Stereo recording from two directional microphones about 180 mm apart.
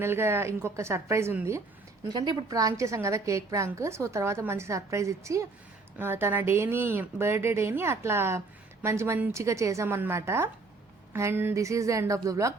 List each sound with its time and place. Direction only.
0.0 s a woman's voice: 15° right (ahead or behind)